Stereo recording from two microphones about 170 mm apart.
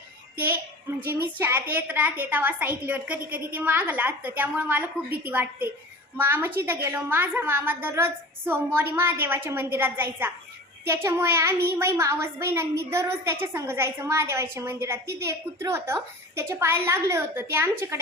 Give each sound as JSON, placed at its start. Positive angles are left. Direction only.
{"t": 1.0, "sound": "a woman's voice", "side_deg": -10}